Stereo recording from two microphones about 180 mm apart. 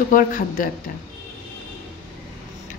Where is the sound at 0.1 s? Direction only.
50° left (ahead or behind).